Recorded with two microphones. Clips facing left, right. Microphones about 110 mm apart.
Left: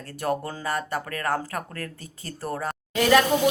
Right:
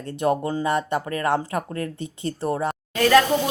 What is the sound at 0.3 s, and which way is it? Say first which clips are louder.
Speech: right 5 dB; 5° right (ahead or behind).